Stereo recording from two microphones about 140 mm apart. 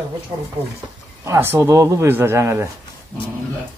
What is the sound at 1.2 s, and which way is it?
Speech, 20° right (ahead or behind).